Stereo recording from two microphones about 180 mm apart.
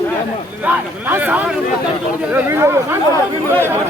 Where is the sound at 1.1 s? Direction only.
10° right (ahead or behind).